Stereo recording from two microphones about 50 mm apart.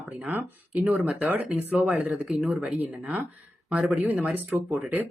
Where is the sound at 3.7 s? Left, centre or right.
Right.